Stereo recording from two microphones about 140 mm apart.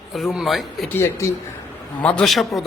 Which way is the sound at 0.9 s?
20° left (ahead or behind).